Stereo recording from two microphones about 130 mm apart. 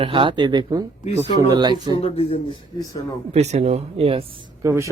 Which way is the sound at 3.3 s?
55° right (ahead or behind).